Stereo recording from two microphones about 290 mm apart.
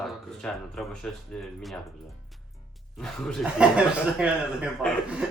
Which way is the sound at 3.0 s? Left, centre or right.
Centre.